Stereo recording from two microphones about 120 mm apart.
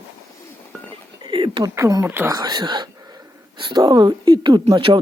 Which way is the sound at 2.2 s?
35° right (ahead or behind).